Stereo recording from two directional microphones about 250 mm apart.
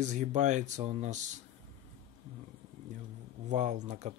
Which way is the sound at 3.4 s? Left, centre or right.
Right.